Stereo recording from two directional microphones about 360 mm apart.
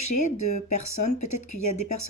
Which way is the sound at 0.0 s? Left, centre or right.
Left.